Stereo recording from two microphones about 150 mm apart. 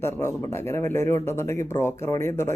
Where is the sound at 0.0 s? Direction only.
15° left (ahead or behind).